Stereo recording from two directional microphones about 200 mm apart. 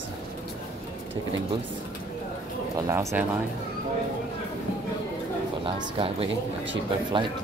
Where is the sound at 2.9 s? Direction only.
15° right (ahead or behind).